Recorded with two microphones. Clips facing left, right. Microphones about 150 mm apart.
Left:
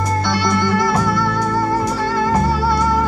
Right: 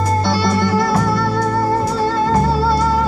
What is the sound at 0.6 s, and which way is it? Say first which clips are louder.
Music: right 1 dB; 5° right (ahead or behind).